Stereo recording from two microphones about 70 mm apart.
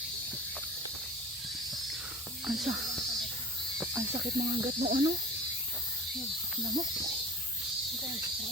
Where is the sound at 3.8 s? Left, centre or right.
Right.